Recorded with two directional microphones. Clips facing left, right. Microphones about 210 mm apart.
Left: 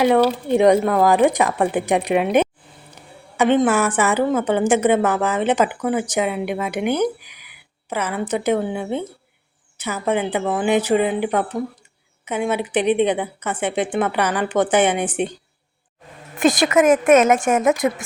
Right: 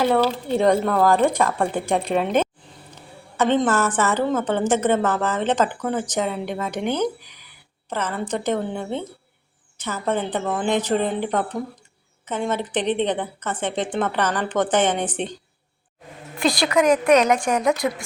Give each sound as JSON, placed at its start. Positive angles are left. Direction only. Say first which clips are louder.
{"t": 0.0, "sound": "a woman's voice", "louder": "left 4 dB", "side_deg": 10}
{"t": 16.5, "sound": "speech", "louder": "left 3 dB", "side_deg": 20}
{"t": 16.8, "sound": "speech", "louder": "left 3 dB", "side_deg": 45}
{"t": 17.2, "sound": "speech", "louder": "left 3 dB", "side_deg": 25}